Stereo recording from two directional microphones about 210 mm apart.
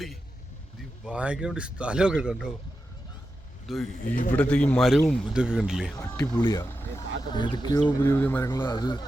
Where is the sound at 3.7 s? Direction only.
Centre (ahead or behind).